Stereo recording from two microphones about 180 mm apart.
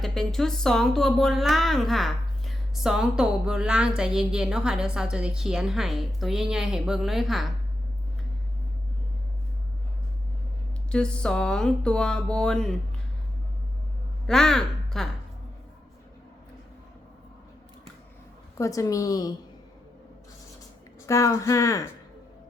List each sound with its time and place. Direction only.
0.0 s speech: centre (ahead or behind)
10.9 s speech: 5° left (ahead or behind)
14.3 s speech: 5° left (ahead or behind)
18.5 s a woman's voice: 15° left (ahead or behind)
21.1 s speech: 15° left (ahead or behind)